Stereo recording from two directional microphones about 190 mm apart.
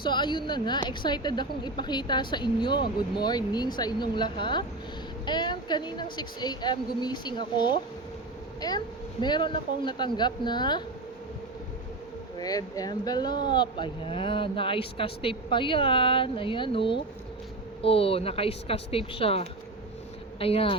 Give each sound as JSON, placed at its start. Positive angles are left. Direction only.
{"t": 0.0, "sound": "a woman's voice", "side_deg": 25}
{"t": 12.4, "sound": "a woman's voice", "side_deg": 20}